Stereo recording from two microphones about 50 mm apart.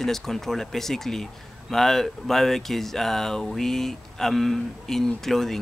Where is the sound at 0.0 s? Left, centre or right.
Centre.